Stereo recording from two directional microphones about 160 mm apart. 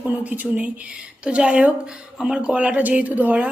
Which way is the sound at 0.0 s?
10° right (ahead or behind).